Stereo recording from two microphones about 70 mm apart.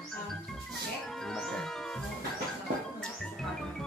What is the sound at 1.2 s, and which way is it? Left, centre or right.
Music, centre.